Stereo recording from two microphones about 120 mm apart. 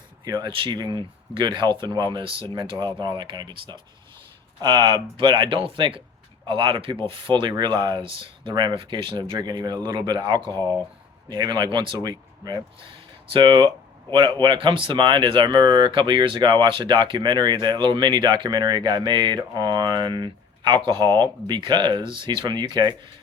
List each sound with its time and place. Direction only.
0.3 s speech: 35° right (ahead or behind)
10.5 s speech: 15° left (ahead or behind)
11.3 s speech: 35° right (ahead or behind)
13.3 s speech: 45° right (ahead or behind)